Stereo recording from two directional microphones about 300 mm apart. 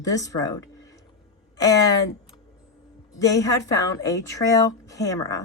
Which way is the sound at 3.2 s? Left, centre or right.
Centre.